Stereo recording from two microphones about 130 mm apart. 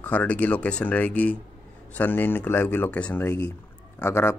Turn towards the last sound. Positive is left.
turn(degrees=20)  # may be behind; listen again after turning